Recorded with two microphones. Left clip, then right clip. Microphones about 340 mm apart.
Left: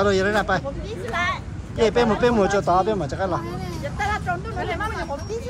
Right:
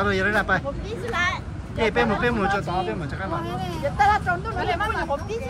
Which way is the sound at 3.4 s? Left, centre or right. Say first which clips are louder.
Right 3 dB; centre.